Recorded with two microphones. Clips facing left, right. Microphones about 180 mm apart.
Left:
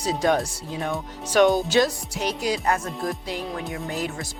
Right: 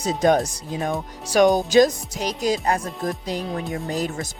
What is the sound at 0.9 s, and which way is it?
Speech, 10° right (ahead or behind).